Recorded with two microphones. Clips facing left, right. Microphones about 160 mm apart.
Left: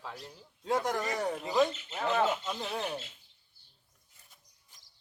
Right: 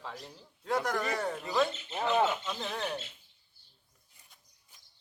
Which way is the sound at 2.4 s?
10° left (ahead or behind).